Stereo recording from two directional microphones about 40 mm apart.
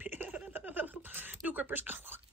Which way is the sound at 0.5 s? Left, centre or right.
Right.